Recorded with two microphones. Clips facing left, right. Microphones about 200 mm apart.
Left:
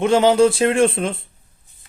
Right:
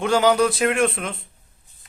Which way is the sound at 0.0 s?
25° left (ahead or behind).